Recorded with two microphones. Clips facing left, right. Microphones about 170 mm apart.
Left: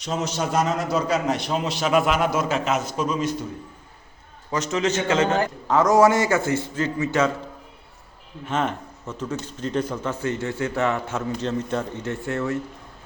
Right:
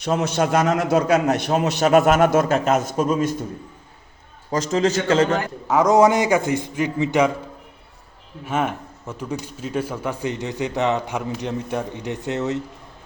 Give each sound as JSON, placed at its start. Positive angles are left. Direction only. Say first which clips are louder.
{"t": 0.0, "sound": "a man's voice", "louder": "right 5 dB", "side_deg": -60}
{"t": 4.7, "sound": "a man's voice", "louder": "right 3 dB", "side_deg": -35}
{"t": 5.6, "sound": "speech", "louder": "right 2 dB", "side_deg": -10}
{"t": 8.4, "sound": "speech", "louder": "right 2 dB", "side_deg": -10}